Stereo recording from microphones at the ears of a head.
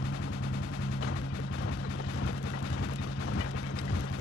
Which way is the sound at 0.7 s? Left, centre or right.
Left.